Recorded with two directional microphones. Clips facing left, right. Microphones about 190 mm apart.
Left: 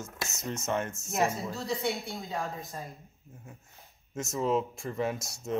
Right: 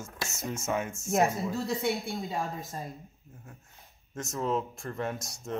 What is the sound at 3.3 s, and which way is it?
Speech, 5° left (ahead or behind).